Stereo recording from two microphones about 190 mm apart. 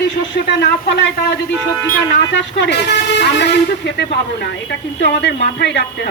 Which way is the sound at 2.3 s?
65° left (ahead or behind).